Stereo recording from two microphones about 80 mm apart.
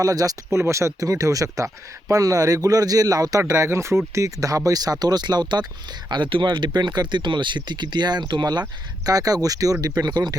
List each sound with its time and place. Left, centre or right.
0.0 s speech: right
0.6 s speech: right
6.1 s speech: right
9.0 s speech: right